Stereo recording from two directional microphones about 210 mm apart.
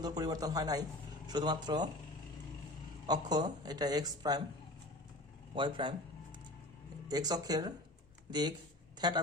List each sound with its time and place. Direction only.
0.0 s a man's voice: 20° right (ahead or behind)
3.1 s speech: 20° right (ahead or behind)
5.5 s speech: 25° right (ahead or behind)
7.1 s a man's voice: 20° right (ahead or behind)